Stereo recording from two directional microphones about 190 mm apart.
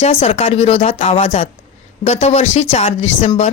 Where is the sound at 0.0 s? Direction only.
35° left (ahead or behind).